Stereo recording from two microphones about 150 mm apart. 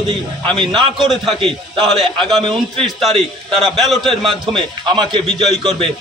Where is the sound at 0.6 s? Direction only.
35° right (ahead or behind).